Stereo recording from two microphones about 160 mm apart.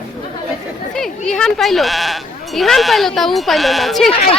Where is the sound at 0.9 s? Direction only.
5° left (ahead or behind).